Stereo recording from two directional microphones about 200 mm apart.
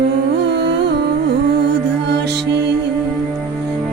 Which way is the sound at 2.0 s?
55° right (ahead or behind).